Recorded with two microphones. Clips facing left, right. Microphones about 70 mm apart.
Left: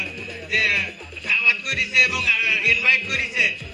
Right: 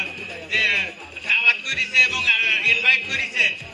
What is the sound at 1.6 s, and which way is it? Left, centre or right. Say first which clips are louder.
Music: even; left.